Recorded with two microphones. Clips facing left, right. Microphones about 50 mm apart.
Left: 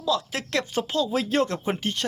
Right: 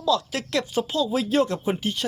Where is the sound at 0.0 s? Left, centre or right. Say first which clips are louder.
Right 3 dB; left.